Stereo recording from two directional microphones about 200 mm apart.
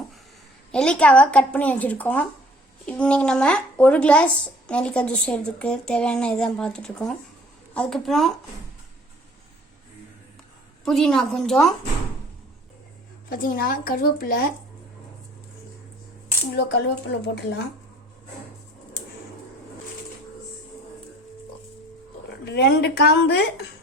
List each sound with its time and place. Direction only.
0.7 s speech: 5° left (ahead or behind)
10.8 s speech: centre (ahead or behind)
13.3 s speech: 45° left (ahead or behind)
16.6 s speech: 60° left (ahead or behind)
22.4 s speech: 55° left (ahead or behind)